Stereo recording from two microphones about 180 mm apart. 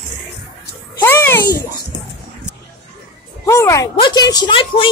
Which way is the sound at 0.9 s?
15° left (ahead or behind).